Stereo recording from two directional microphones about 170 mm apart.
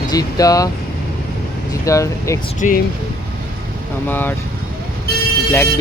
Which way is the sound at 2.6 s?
45° left (ahead or behind).